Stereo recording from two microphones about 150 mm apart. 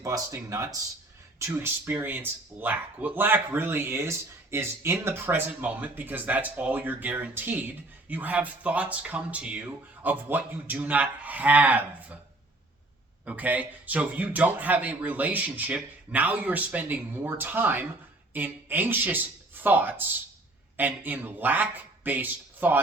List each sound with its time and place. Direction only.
0.0 s speech: 20° right (ahead or behind)
13.2 s speech: 10° right (ahead or behind)